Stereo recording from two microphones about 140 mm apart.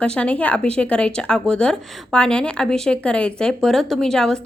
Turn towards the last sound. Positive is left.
turn(degrees=5)  # may be behind; listen again after turning